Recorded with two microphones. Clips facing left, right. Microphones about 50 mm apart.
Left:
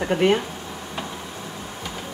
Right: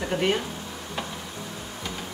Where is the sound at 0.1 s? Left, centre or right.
Left.